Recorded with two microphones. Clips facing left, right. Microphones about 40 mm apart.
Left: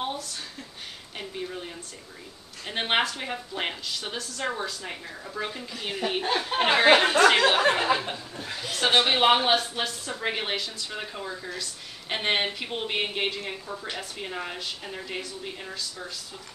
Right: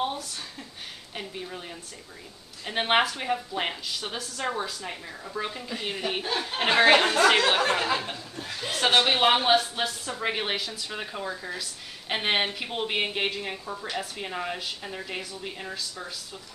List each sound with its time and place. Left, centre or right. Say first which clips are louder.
0.0 s a sound: right 2 dB; centre
1.1 s a woman's voice: left 2 dB; centre
7.3 s a woman's voice: left 2 dB; left; by 16.1 s centre